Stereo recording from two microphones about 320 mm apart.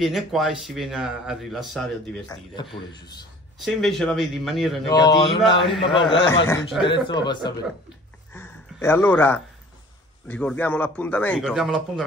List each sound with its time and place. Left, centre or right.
0.0 s a man's voice: centre
2.5 s a man's voice: centre
3.6 s a man's voice: centre
4.8 s a man's voice: centre
6.4 s a man's voice: centre
6.9 s a man's voice: centre
8.3 s a sound: centre
10.2 s a man's voice: centre